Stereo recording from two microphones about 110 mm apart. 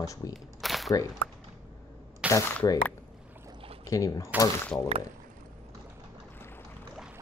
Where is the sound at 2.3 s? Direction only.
35° left (ahead or behind).